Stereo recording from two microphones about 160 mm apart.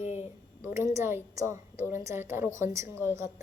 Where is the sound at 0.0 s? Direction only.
45° left (ahead or behind).